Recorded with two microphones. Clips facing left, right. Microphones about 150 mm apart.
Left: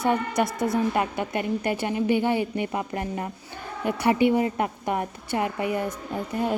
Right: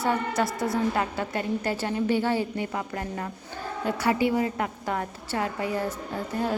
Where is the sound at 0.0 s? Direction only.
20° left (ahead or behind).